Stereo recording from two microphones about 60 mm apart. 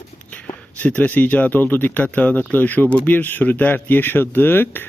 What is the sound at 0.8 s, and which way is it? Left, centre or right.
Speech, left.